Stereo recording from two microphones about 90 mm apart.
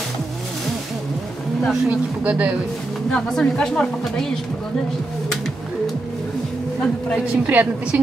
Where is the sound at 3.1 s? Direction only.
5° left (ahead or behind).